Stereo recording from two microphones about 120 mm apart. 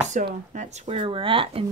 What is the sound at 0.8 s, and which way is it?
Speech, 50° right (ahead or behind).